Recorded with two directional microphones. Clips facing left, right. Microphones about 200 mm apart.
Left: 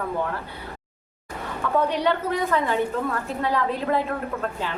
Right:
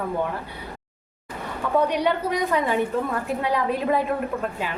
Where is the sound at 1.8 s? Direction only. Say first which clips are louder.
Right 1 dB; 15° right (ahead or behind).